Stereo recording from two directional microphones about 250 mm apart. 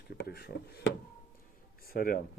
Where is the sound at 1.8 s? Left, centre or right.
Left.